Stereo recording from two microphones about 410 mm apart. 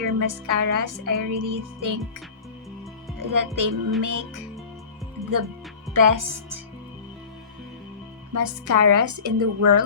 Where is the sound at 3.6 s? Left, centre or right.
Right.